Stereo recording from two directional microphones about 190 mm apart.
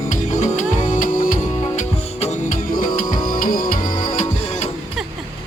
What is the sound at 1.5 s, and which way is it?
Music, 20° left (ahead or behind).